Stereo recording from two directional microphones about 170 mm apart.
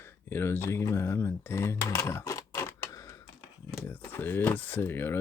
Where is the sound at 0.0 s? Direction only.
15° left (ahead or behind).